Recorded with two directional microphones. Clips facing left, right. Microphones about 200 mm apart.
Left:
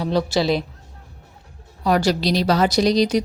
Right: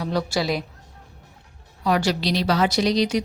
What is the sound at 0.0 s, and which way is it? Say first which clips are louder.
Speech: left 4 dB; 25° left (ahead or behind).